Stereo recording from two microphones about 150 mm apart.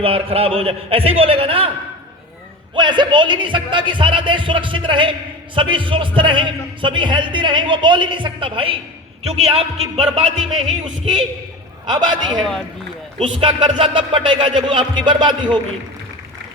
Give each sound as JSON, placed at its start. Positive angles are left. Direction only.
{"t": 0.0, "sound": "a man's voice", "side_deg": -40}
{"t": 2.7, "sound": "a man's voice", "side_deg": -30}
{"t": 12.4, "sound": "speech", "side_deg": 5}
{"t": 13.1, "sound": "a man's voice", "side_deg": -35}